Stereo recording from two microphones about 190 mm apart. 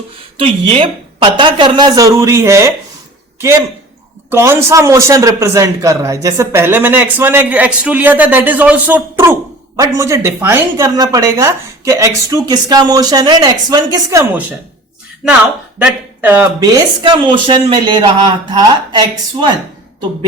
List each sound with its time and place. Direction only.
0.3 s speech: 30° right (ahead or behind)
4.3 s a man's voice: 15° right (ahead or behind)
15.8 s a man's voice: 10° right (ahead or behind)
17.0 s speech: 25° right (ahead or behind)